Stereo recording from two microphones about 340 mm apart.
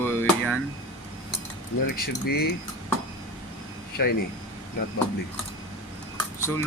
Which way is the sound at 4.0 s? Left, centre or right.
Left.